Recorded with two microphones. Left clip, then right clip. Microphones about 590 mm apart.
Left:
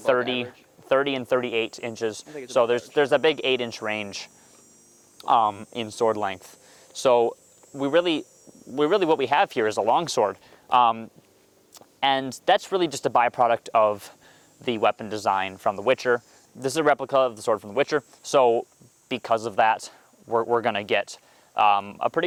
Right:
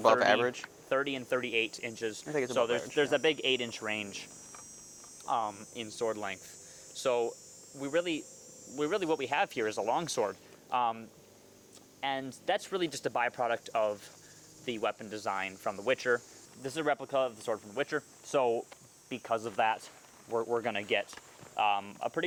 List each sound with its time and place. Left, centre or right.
0.9 s speech: left
5.1 s speech: left
8.7 s speech: left
11.9 s speech: left